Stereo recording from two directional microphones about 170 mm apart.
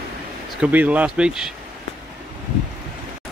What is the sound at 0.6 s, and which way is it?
Speech, 10° right (ahead or behind).